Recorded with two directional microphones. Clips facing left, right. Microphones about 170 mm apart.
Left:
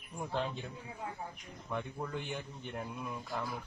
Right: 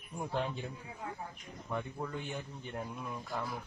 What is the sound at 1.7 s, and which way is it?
Speech, centre (ahead or behind).